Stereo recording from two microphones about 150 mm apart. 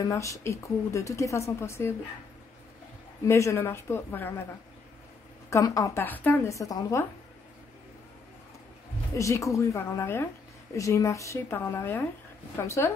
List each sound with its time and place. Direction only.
0.0 s a woman's voice: 20° left (ahead or behind)
3.3 s a woman's voice: 20° left (ahead or behind)
5.5 s a woman's voice: 20° left (ahead or behind)
9.1 s a woman's voice: 20° left (ahead or behind)